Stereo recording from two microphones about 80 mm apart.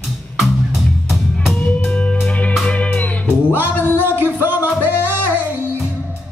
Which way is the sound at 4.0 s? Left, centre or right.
Right.